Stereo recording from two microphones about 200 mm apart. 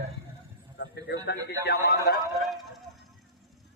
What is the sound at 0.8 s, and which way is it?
A man's voice, 60° left (ahead or behind).